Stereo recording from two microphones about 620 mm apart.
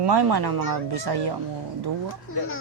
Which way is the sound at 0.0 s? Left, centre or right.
Right.